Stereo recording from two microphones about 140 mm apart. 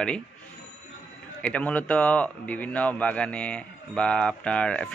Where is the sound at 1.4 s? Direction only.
10° left (ahead or behind).